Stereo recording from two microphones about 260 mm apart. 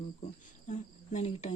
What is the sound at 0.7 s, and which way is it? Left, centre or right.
Cricket, left.